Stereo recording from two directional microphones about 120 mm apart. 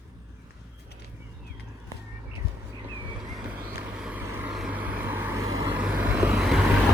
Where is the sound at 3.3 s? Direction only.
5° right (ahead or behind).